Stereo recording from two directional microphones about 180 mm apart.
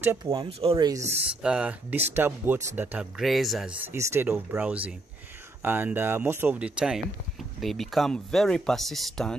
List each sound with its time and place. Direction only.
0.2 s speech: 25° right (ahead or behind)
1.1 s speech: 5° right (ahead or behind)